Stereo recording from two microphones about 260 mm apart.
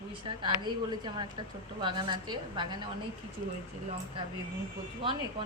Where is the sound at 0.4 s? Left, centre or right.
Centre.